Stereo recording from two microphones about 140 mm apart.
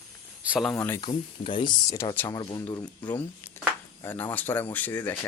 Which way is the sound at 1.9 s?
25° left (ahead or behind).